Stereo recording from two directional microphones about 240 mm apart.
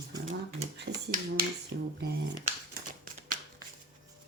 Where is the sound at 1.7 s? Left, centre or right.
Right.